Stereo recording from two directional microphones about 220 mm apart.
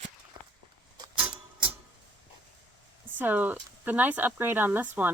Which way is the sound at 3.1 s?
10° right (ahead or behind).